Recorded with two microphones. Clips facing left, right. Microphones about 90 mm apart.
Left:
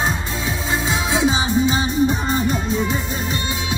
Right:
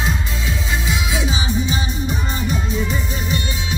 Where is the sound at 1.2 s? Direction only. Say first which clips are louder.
Left 5 dB; 35° left (ahead or behind).